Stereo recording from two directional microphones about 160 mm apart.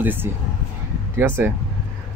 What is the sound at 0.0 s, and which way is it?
Speech, 10° right (ahead or behind).